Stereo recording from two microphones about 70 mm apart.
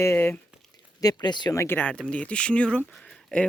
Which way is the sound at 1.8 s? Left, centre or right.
Centre.